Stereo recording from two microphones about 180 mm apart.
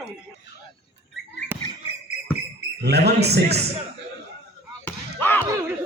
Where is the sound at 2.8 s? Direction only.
65° right (ahead or behind).